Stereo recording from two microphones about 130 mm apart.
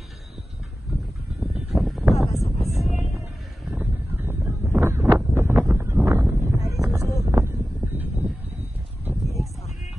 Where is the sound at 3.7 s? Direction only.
15° right (ahead or behind).